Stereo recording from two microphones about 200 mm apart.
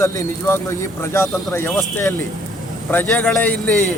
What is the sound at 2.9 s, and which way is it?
Speech, 10° left (ahead or behind).